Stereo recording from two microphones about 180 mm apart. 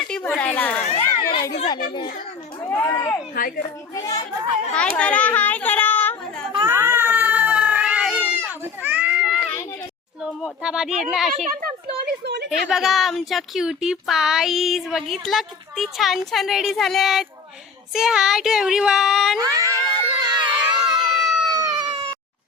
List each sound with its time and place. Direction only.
0.1 s a sound: 5° left (ahead or behind)
2.8 s speech: 10° left (ahead or behind)
3.3 s speech: 50° left (ahead or behind)
3.9 s a child's voice: 20° left (ahead or behind)
4.7 s a child's voice: 5° left (ahead or behind)
6.7 s cat: 15° right (ahead or behind)
10.4 s speech: 5° right (ahead or behind)
11.4 s a sound: 60° right (ahead or behind)
12.5 s speech: centre (ahead or behind)
19.4 s a sound: 20° right (ahead or behind)
21.2 s a sound: centre (ahead or behind)
21.5 s baby cry: 20° right (ahead or behind)